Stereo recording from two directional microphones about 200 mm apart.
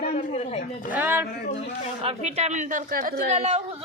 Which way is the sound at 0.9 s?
10° right (ahead or behind).